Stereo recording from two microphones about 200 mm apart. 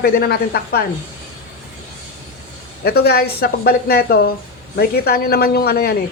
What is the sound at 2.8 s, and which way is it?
Speech, 50° left (ahead or behind).